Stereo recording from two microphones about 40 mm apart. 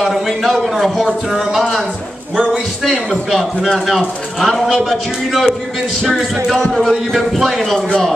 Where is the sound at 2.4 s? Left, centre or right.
Centre.